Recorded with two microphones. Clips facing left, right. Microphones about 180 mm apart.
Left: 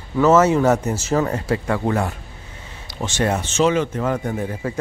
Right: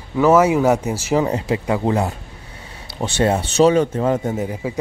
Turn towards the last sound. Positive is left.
turn(degrees=-15)  # may be behind; listen again after turning